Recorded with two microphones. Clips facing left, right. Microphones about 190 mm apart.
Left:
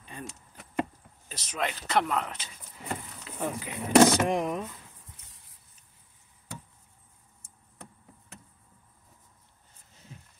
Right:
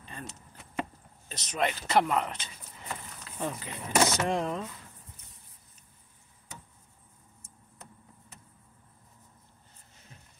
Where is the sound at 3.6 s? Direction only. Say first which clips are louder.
Left 9 dB; 10° left (ahead or behind).